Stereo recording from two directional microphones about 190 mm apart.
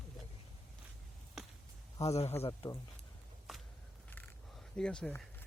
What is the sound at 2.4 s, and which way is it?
Speech, 20° left (ahead or behind).